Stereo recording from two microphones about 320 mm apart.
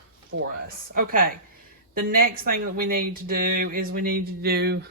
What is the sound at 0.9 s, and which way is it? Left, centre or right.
Speech, right.